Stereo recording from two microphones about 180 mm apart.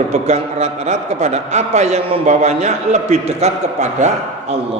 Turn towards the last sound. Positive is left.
turn(degrees=-40)  # may be behind; listen again after turning